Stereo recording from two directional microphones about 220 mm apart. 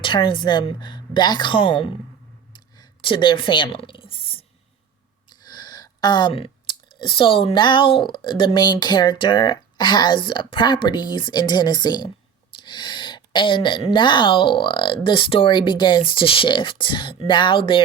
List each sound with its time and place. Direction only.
0.0 s speech: 20° left (ahead or behind)
2.5 s a sound: 20° left (ahead or behind)
5.5 s speech: 20° left (ahead or behind)